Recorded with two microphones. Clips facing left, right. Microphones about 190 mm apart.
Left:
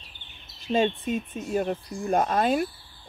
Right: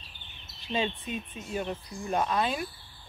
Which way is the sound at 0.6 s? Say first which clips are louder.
Left 7 dB; 45° left (ahead or behind).